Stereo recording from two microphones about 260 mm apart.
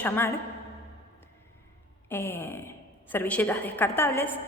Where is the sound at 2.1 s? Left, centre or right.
Centre.